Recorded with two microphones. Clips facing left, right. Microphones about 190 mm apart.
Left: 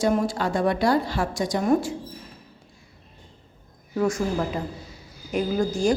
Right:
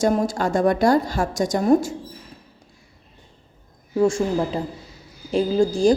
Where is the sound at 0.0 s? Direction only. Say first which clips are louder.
Right 2 dB; 45° right (ahead or behind).